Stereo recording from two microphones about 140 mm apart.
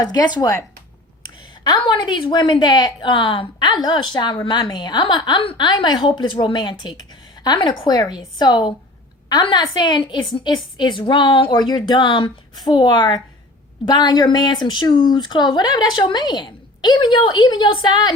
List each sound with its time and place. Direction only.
0.0 s speech: 30° left (ahead or behind)
1.6 s speech: 30° left (ahead or behind)